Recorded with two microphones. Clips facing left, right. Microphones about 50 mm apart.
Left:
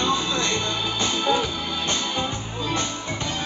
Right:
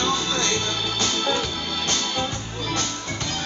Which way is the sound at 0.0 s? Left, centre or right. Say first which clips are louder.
Even; centre.